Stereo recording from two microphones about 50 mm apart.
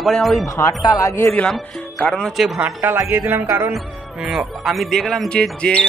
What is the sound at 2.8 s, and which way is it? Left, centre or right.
Speech, right.